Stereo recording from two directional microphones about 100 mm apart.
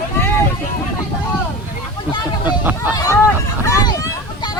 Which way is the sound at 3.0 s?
35° left (ahead or behind).